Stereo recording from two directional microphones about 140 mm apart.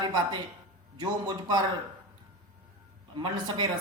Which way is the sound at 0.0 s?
30° right (ahead or behind).